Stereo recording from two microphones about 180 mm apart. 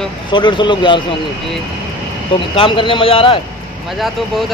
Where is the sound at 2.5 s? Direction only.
30° left (ahead or behind).